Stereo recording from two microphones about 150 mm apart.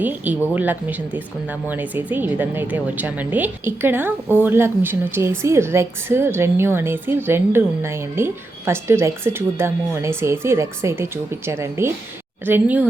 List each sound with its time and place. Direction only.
0.0 s speech: 10° right (ahead or behind)